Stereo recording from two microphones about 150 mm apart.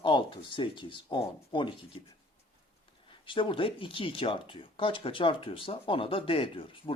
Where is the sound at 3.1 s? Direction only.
35° left (ahead or behind).